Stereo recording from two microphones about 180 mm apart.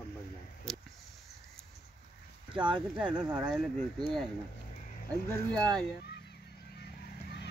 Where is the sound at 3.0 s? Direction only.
5° right (ahead or behind).